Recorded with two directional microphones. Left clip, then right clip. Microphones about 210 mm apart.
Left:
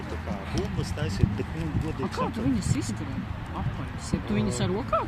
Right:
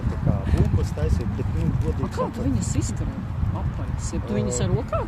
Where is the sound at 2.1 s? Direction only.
30° left (ahead or behind).